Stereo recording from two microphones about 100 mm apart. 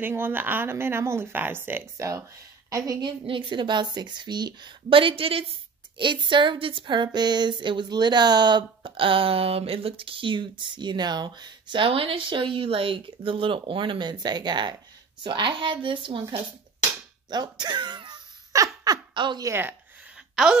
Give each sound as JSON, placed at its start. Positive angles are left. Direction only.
{"t": 0.0, "sound": "a woman's voice", "side_deg": -20}
{"t": 3.0, "sound": "speech", "side_deg": -55}
{"t": 5.9, "sound": "a woman's voice", "side_deg": -55}
{"t": 17.3, "sound": "a sound", "side_deg": -45}
{"t": 19.1, "sound": "speech", "side_deg": -50}
{"t": 19.4, "sound": "speech", "side_deg": -25}